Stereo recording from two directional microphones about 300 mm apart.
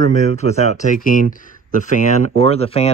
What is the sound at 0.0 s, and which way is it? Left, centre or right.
Speech, left.